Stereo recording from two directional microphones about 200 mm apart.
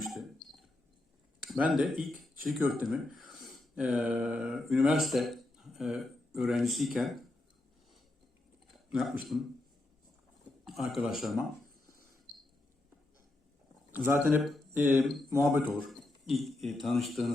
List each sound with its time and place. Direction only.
0.0 s dog: centre (ahead or behind)
1.7 s speech: centre (ahead or behind)
8.9 s speech: centre (ahead or behind)
10.7 s speech: centre (ahead or behind)
13.9 s speech: 10° right (ahead or behind)
15.9 s speech: centre (ahead or behind)